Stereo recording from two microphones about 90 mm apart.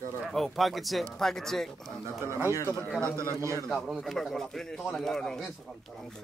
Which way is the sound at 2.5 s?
35° left (ahead or behind).